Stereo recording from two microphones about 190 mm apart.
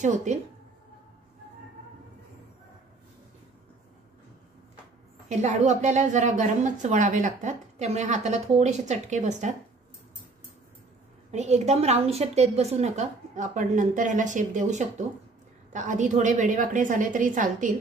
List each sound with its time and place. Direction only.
0.0 s a woman's voice: 40° right (ahead or behind)
5.4 s a woman's voice: 35° right (ahead or behind)
11.3 s a woman's voice: 35° right (ahead or behind)